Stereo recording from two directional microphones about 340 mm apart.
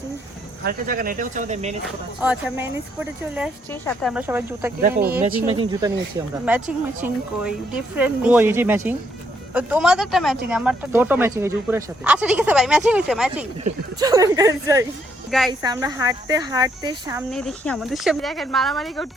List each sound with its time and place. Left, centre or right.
0.6 s speech: right
2.2 s speech: centre
3.7 s speech: centre
4.1 s speech: centre
4.8 s speech: right; by 15.5 s centre
15.6 s speech: centre
17.3 s speech: centre